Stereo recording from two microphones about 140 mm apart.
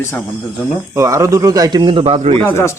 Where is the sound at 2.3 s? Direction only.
15° left (ahead or behind).